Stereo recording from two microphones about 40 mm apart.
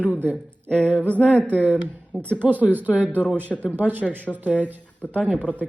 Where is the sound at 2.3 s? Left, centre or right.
Right.